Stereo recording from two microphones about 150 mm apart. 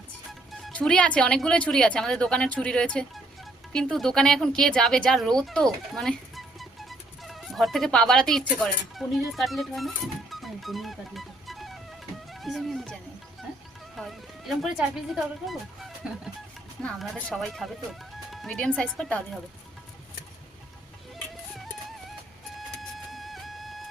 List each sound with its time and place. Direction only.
0.5 s speech: 5° left (ahead or behind)
12.3 s music: centre (ahead or behind)
13.9 s speech: centre (ahead or behind)
18.3 s music: 5° left (ahead or behind)
18.8 s speech: 5° left (ahead or behind)
23.0 s music: centre (ahead or behind)